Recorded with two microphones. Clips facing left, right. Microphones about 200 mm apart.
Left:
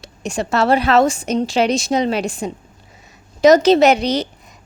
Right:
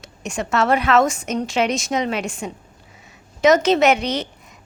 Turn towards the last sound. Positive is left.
turn(degrees=35)  # may be behind; listen again after turning